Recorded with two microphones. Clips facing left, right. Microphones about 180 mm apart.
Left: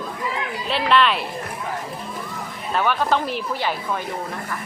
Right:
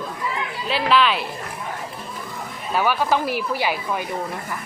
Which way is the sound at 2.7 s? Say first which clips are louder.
Even; 5° right (ahead or behind).